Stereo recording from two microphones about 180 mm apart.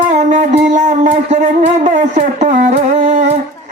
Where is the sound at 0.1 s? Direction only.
45° right (ahead or behind).